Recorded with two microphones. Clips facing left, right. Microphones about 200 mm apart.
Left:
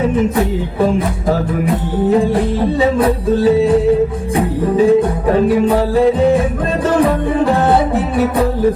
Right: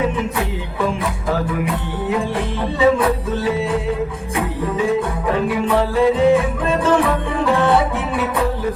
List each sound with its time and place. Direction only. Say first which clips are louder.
0.2 s music: left 8 dB; 40° left (ahead or behind)
6.8 s music: left 5 dB; 40° left (ahead or behind)